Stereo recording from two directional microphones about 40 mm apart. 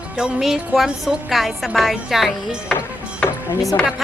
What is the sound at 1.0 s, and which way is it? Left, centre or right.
A woman's voice, centre.